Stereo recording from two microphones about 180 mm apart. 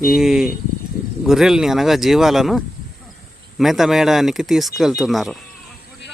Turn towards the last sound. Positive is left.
turn(degrees=0)  # may be behind; listen again after turning